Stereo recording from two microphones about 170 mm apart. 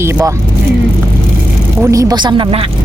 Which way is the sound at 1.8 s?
20° right (ahead or behind).